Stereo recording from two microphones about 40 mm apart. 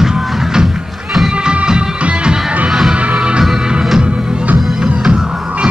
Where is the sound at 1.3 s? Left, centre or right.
Right.